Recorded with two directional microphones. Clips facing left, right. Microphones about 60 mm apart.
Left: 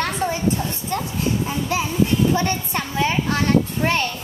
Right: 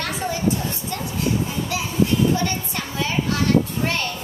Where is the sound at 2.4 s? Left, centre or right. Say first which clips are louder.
Left 3 dB; left.